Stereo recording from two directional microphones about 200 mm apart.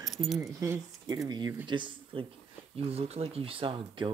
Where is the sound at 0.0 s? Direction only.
Centre (ahead or behind).